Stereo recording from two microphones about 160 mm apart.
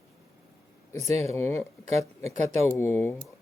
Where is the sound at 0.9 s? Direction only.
40° right (ahead or behind).